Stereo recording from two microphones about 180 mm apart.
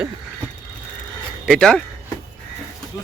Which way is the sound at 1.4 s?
5° left (ahead or behind).